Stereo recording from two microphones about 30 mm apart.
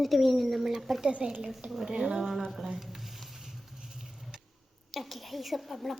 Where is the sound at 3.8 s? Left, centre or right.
Centre.